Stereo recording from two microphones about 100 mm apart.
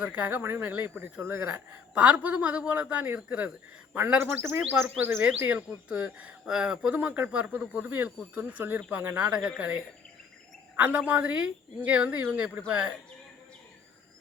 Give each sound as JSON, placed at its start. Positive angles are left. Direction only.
{"t": 0.0, "sound": "speech", "side_deg": -15}
{"t": 2.0, "sound": "speech", "side_deg": -15}
{"t": 10.8, "sound": "speech", "side_deg": -15}